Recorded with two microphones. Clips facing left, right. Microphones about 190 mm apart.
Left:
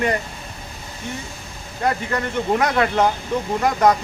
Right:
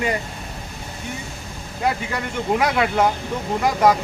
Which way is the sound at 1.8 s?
10° right (ahead or behind).